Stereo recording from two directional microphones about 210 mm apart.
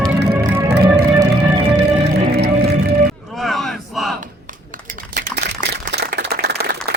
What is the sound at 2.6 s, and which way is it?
Music, 50° right (ahead or behind).